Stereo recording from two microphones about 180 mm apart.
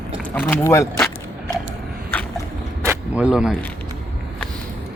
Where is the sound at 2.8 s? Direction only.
5° right (ahead or behind).